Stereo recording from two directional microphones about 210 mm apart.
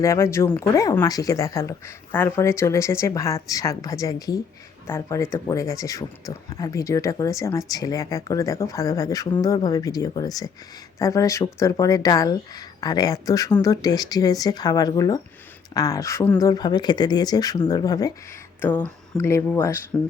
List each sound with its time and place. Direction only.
0.0 s speech: 15° left (ahead or behind)